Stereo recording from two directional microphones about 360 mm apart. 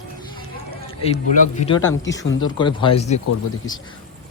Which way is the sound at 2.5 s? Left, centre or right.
Centre.